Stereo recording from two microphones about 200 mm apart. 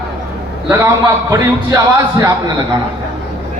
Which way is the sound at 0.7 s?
15° right (ahead or behind).